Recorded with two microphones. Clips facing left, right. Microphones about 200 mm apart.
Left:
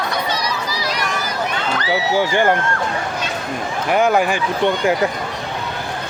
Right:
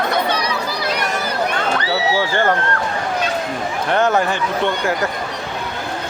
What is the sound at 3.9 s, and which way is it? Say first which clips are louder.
Speech: left 1 dB; 10° left (ahead or behind).